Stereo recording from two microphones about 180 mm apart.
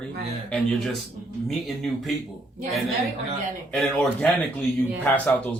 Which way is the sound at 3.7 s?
5° left (ahead or behind).